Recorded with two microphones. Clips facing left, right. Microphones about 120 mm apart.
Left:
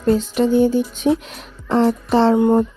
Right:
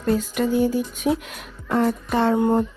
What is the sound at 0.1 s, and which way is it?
Speech, 25° left (ahead or behind).